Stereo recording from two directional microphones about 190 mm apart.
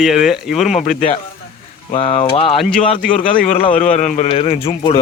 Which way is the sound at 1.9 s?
30° left (ahead or behind).